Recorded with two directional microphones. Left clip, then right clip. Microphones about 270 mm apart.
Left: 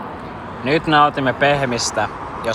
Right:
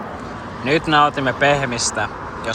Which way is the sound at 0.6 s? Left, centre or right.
Centre.